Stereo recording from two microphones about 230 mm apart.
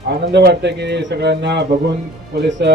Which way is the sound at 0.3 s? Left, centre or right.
Right.